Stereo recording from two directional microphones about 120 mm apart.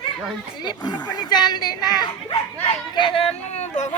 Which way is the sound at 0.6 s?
40° left (ahead or behind).